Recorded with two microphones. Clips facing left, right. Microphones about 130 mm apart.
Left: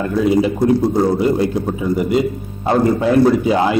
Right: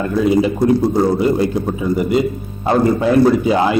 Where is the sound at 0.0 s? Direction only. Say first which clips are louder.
Even; 20° right (ahead or behind).